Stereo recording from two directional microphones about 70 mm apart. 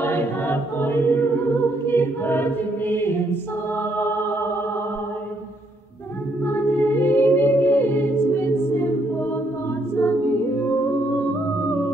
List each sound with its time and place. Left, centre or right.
0.0 s choir: left
4.0 s music: left
6.4 s music: left
9.9 s a capella: left